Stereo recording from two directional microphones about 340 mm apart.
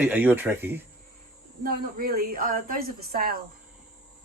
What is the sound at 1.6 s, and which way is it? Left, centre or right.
A woman's voice, right.